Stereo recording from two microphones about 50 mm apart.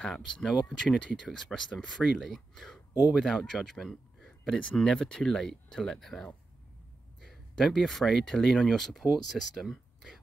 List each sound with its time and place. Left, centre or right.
0.1 s speech: centre
4.6 s speech: left; by 9.0 s centre
9.3 s a sound: centre